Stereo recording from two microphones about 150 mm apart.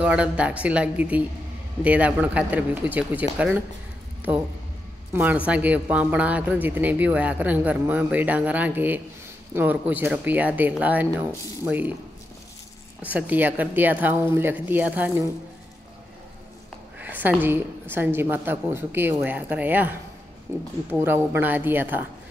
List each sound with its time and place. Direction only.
0.0 s speech: 10° right (ahead or behind)
5.1 s speech: 10° right (ahead or behind)
13.0 s speech: 10° right (ahead or behind)
17.0 s speech: 10° right (ahead or behind)